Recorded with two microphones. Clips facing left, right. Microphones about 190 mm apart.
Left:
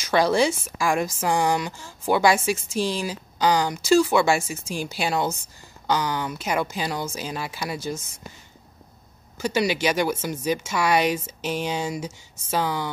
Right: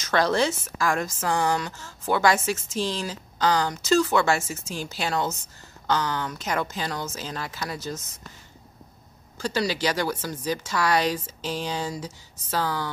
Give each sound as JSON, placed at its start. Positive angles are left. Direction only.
{"t": 0.0, "sound": "a woman's voice", "side_deg": 10}
{"t": 9.4, "sound": "speech", "side_deg": 20}